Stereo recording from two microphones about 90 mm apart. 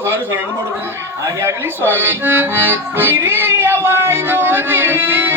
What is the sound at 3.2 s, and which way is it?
Music, 25° right (ahead or behind).